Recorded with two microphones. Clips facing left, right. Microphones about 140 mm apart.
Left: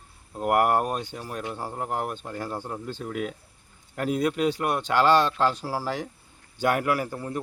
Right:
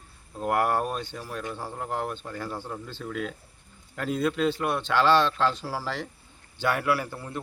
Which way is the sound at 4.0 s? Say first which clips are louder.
Left 1 dB; 10° left (ahead or behind).